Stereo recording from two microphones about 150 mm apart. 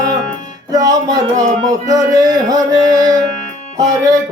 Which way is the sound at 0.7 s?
25° right (ahead or behind).